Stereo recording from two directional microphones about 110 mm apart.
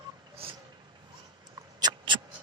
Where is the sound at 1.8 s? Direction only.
45° right (ahead or behind).